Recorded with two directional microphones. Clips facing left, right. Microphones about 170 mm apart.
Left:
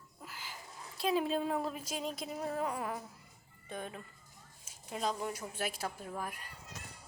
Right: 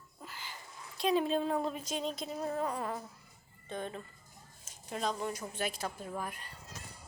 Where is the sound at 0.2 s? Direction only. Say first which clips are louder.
Right 1 dB; 5° left (ahead or behind).